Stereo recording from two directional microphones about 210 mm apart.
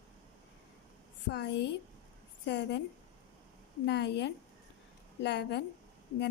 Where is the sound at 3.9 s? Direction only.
55° left (ahead or behind).